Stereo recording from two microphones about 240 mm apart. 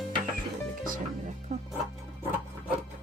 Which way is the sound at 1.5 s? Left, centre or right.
Right.